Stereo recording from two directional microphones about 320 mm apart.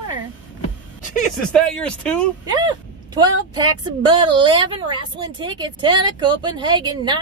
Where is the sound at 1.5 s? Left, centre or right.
Centre.